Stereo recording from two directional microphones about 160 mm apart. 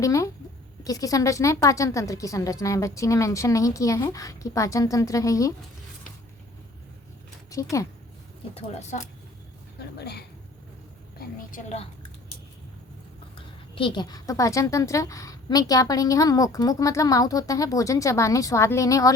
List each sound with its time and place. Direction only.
0.0 s a woman's voice: 20° left (ahead or behind)
7.5 s a woman's voice: 20° left (ahead or behind)
8.5 s speech: 40° left (ahead or behind)
10.0 s speech: 90° left
11.2 s a woman's voice: 60° left (ahead or behind)
13.3 s a woman's voice: 30° left (ahead or behind)